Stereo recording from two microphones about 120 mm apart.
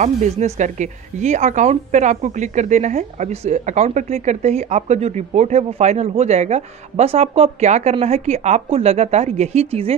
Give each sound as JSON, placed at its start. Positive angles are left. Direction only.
{"t": 0.0, "sound": "speech", "side_deg": -90}